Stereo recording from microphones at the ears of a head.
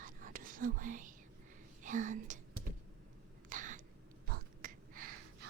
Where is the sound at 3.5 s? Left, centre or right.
Right.